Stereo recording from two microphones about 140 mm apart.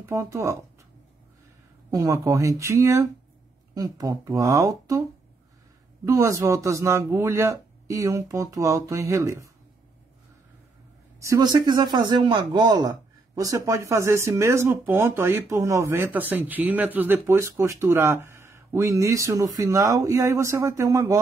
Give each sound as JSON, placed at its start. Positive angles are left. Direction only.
{"t": 0.0, "sound": "speech", "side_deg": -20}
{"t": 1.9, "sound": "speech", "side_deg": -25}
{"t": 6.0, "sound": "speech", "side_deg": -20}
{"t": 11.1, "sound": "a man's voice", "side_deg": -25}